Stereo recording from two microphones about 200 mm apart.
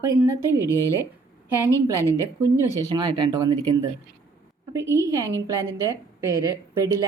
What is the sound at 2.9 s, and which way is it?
Speech, 20° right (ahead or behind).